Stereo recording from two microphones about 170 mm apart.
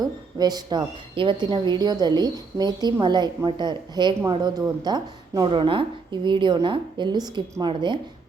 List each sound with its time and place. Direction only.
0.0 s a woman's voice: 25° right (ahead or behind)